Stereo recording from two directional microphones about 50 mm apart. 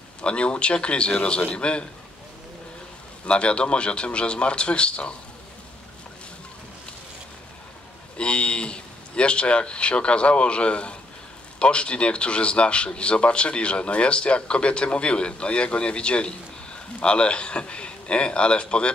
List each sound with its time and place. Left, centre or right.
0.2 s speech: left
3.3 s speech: left
8.2 s speech: left